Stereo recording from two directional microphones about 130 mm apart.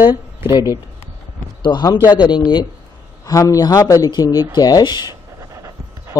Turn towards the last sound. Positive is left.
turn(degrees=-25)  # may be behind; listen again after turning